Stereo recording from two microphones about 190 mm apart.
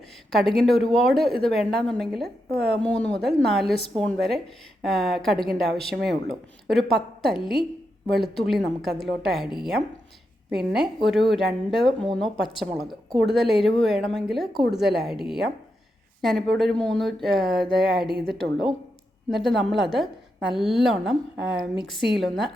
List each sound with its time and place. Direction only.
0.3 s a woman's voice: centre (ahead or behind)
10.5 s a woman's voice: centre (ahead or behind)
16.2 s a woman's voice: centre (ahead or behind)